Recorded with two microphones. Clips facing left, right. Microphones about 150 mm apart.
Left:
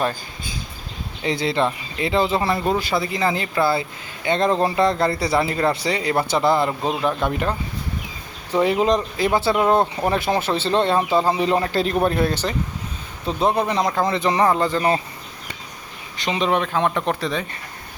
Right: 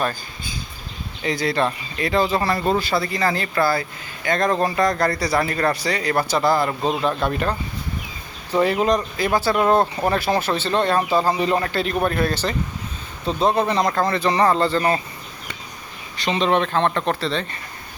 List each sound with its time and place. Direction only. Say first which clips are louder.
1.2 s speech: even; 25° left (ahead or behind)
8.5 s speech: even; 15° left (ahead or behind)
9.6 s speech: even; 15° left (ahead or behind)
11.7 s a man's voice: left 2 dB; 35° left (ahead or behind)
12.0 s speech: left 1 dB; 25° left (ahead or behind)
14.3 s speech: right 2 dB; 10° left (ahead or behind)
16.1 s speech: right 1 dB; 15° left (ahead or behind)